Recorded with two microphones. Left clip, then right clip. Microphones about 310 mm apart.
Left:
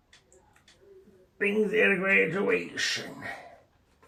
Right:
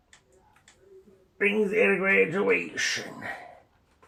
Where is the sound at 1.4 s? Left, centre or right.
Centre.